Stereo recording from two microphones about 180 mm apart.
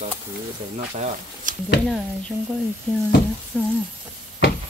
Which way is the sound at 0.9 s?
35° right (ahead or behind).